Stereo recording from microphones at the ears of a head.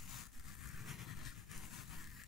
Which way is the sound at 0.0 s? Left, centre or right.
Left.